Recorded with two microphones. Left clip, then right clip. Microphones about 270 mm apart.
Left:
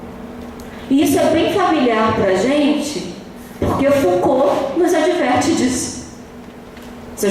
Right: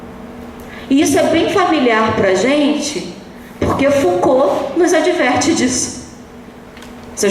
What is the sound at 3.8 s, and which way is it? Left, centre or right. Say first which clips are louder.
A woman's voice: right 1 dB; centre.